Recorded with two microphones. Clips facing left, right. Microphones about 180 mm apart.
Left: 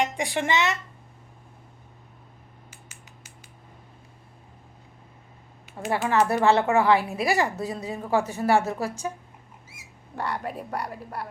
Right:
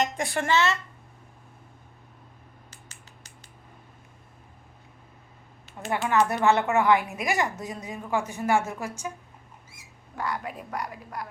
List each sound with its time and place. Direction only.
0.0 s speech: 15° left (ahead or behind)
2.6 s finger snapping: 10° left (ahead or behind)
5.9 s speech: 30° left (ahead or behind)
10.2 s speech: 35° left (ahead or behind)